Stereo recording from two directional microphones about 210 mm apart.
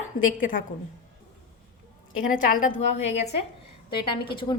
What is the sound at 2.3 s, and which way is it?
A woman's voice, 40° left (ahead or behind).